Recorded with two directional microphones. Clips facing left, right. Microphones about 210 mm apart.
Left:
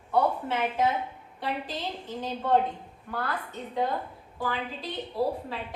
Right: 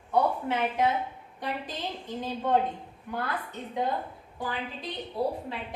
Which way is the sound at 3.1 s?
15° right (ahead or behind).